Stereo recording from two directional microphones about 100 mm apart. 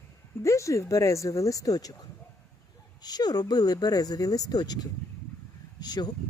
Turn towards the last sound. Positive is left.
turn(degrees=45)  # may be behind; listen again after turning